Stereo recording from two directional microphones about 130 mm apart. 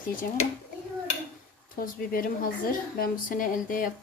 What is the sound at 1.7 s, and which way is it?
Speech, 90° left.